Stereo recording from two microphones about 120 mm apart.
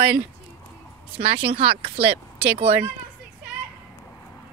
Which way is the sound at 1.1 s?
50° right (ahead or behind).